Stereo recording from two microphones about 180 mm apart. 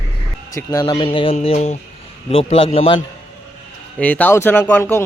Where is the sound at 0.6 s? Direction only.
20° left (ahead or behind).